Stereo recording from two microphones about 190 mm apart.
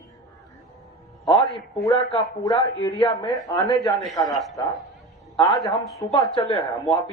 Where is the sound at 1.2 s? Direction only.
25° left (ahead or behind).